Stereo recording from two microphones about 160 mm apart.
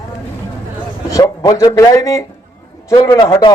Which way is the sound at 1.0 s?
20° left (ahead or behind).